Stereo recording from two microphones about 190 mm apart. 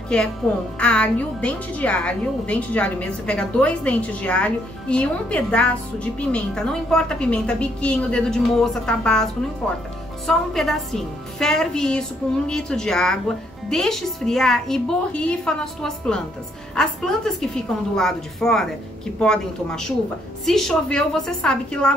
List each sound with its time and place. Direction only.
0.7 s a woman's voice: 5° left (ahead or behind)